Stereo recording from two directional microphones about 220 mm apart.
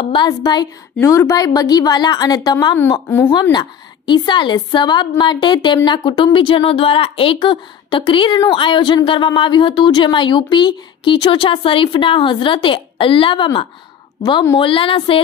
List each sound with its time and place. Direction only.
0.0 s a woman's voice: 20° left (ahead or behind)
3.4 s a woman's voice: 20° left (ahead or behind)